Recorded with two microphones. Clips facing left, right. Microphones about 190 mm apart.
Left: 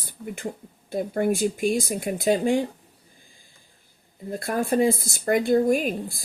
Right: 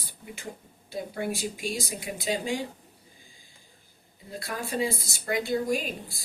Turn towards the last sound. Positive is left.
turn(degrees=55)  # may be behind; listen again after turning